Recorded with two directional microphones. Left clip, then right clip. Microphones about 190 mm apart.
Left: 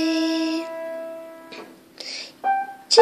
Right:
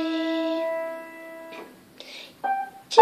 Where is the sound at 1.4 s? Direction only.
15° left (ahead or behind).